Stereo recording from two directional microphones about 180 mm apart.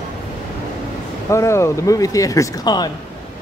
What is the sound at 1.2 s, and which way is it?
Speech, 15° left (ahead or behind).